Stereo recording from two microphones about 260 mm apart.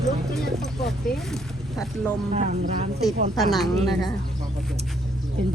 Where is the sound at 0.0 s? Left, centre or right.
Centre.